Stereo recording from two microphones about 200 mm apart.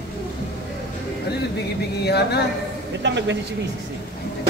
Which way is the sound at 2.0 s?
55° left (ahead or behind).